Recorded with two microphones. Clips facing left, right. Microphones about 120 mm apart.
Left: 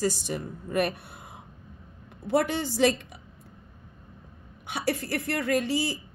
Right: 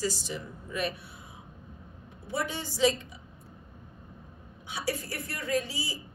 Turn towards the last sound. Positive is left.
turn(degrees=65)  # may be behind; listen again after turning